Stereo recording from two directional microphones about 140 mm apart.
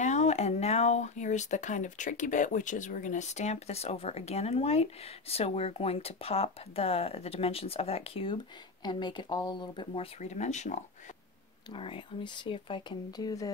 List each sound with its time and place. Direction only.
0.0 s speech: 55° left (ahead or behind); by 10.0 s 35° left (ahead or behind)
10.2 s speech: 55° left (ahead or behind)
11.7 s speech: 40° left (ahead or behind)